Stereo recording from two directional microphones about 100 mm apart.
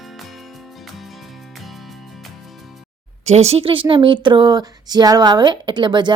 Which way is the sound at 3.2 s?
90° right.